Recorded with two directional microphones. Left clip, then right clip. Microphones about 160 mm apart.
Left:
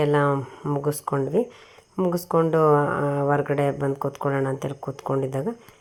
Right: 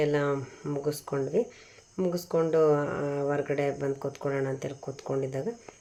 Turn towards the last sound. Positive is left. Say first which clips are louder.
# left 5 dB
turn(degrees=35)  # may be behind; listen again after turning